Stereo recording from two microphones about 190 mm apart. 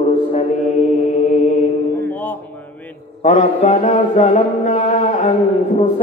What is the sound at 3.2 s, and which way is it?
Music, 35° left (ahead or behind).